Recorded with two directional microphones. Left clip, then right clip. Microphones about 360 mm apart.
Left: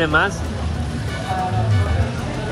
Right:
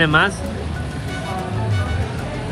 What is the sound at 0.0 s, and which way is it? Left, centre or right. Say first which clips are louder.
Music: right 2 dB; centre.